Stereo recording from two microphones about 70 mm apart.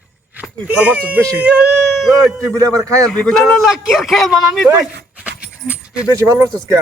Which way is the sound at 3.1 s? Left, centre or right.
Centre.